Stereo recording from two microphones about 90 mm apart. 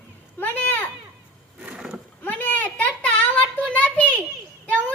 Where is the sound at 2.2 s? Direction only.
20° left (ahead or behind).